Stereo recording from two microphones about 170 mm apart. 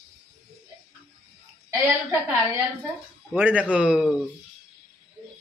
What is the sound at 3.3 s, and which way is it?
Speech, 10° right (ahead or behind).